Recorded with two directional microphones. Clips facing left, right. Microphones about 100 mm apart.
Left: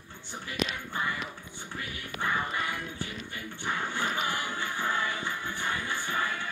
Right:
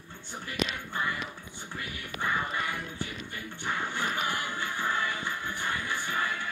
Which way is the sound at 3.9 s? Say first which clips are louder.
Even; 20° left (ahead or behind).